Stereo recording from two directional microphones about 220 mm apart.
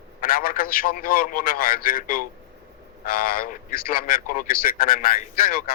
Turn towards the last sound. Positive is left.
turn(degrees=40)  # may be behind; listen again after turning